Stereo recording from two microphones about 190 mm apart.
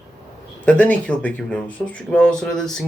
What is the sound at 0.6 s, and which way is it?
Speech, 5° left (ahead or behind).